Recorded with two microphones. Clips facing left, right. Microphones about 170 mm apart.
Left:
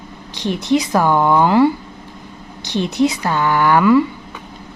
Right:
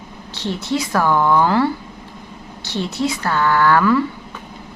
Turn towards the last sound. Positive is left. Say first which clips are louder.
# left 3 dB
turn(degrees=15)  # may be behind; listen again after turning